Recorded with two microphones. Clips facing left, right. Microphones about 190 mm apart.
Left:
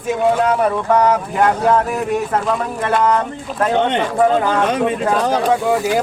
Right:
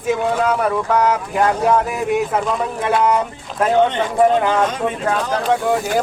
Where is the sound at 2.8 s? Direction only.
10° right (ahead or behind).